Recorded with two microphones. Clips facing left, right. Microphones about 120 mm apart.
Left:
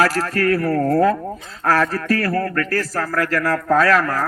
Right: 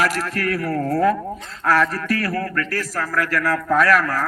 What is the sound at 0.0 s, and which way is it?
A man's voice, 30° left (ahead or behind).